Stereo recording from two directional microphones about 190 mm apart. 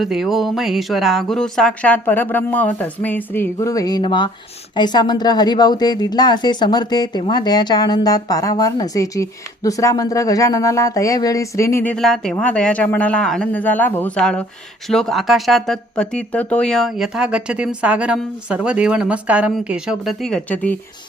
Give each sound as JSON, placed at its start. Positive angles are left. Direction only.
{"t": 0.0, "sound": "speech", "side_deg": 0}